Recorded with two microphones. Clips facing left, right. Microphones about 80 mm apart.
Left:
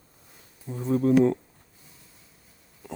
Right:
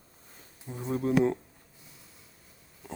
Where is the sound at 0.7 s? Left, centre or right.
Right.